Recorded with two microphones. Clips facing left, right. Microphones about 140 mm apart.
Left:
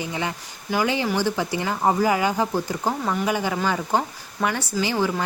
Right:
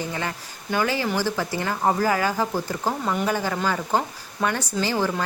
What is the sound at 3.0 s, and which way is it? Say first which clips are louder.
Speech: right 1 dB; centre (ahead or behind).